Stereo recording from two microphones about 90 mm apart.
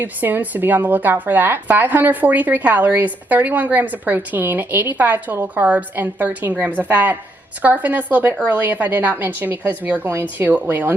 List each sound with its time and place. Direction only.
0.0 s speech: 20° right (ahead or behind)